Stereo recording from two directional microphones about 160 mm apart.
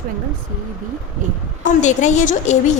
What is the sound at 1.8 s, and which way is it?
A woman's voice, 50° left (ahead or behind).